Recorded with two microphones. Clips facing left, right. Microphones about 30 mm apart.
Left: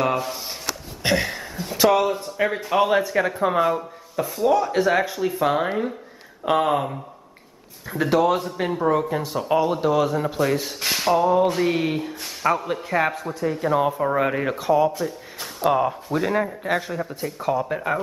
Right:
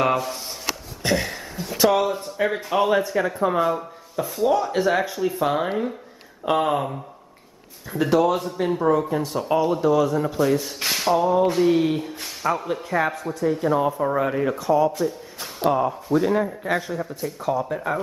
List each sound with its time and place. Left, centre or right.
0.0 s speech: centre
1.0 s a sound: centre
1.8 s speech: centre
14.1 s speech: left
14.6 s speech: centre
14.9 s speech: centre
16.2 s speech: centre